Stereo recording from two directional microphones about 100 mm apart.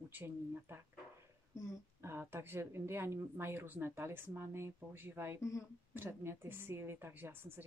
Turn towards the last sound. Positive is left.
turn(degrees=-20)  # may be behind; listen again after turning